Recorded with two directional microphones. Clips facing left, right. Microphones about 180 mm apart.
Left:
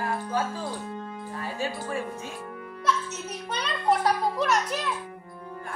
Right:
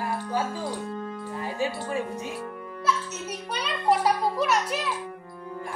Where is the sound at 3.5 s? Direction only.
5° right (ahead or behind).